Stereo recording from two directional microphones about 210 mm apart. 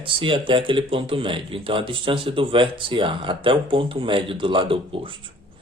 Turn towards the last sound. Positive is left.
turn(degrees=-25)  # may be behind; listen again after turning